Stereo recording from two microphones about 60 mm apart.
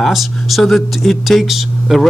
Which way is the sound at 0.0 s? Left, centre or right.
Centre.